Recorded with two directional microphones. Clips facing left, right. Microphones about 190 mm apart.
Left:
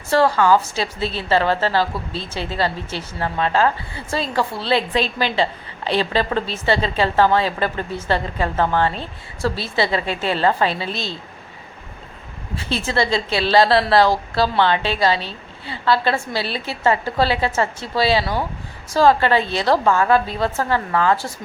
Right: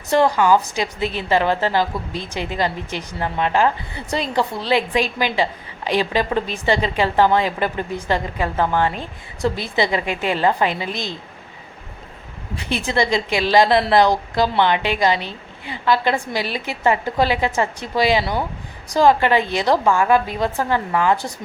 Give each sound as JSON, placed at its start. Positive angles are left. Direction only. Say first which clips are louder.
{"t": 0.1, "sound": "a woman's voice", "louder": "even", "side_deg": -15}
{"t": 12.5, "sound": "a woman's voice", "louder": "right 1 dB", "side_deg": -15}